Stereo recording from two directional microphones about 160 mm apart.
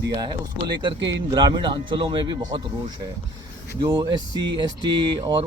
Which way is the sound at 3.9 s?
30° right (ahead or behind).